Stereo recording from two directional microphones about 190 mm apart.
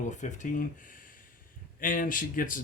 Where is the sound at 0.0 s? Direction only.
40° left (ahead or behind).